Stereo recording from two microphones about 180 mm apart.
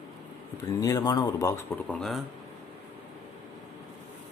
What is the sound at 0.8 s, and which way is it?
Speech, 20° left (ahead or behind).